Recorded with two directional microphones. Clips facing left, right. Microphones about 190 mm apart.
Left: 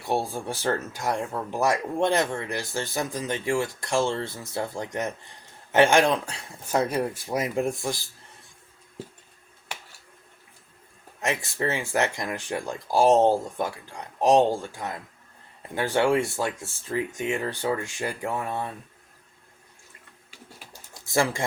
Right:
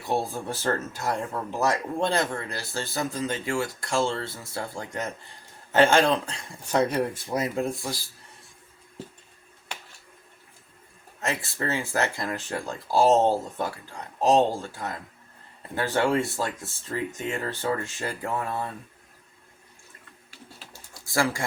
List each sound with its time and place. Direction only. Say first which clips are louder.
0.1 s speech: left 1 dB; 10° left (ahead or behind)
11.2 s speech: left 2 dB; 15° left (ahead or behind)
21.1 s speech: left 1 dB; 20° left (ahead or behind)